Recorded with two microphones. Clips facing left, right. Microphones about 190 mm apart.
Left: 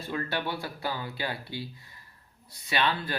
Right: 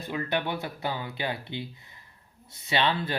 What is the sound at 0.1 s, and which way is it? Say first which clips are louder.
Speech: right 2 dB; 20° right (ahead or behind).